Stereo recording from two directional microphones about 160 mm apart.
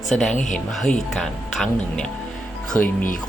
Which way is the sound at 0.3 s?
50° left (ahead or behind).